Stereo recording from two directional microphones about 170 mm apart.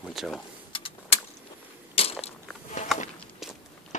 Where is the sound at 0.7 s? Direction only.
30° left (ahead or behind).